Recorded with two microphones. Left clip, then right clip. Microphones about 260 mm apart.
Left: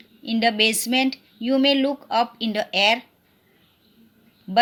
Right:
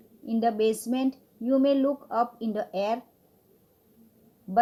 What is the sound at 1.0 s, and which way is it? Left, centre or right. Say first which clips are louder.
Speech: left 8 dB; left.